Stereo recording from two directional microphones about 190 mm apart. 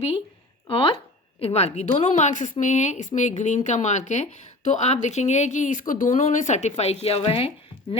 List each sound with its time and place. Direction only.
0.7 s speech: 30° left (ahead or behind)